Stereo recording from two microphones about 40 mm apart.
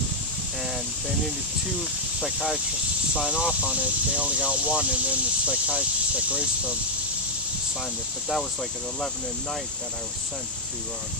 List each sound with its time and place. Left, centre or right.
1.8 s speech: centre
3.3 s speech: centre
3.6 s speech: right
5.7 s speech: right